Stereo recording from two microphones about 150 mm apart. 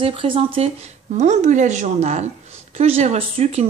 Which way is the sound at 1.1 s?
50° right (ahead or behind).